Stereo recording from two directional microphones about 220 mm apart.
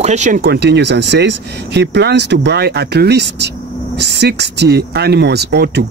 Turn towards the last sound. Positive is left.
turn(degrees=-50)  # may be behind; listen again after turning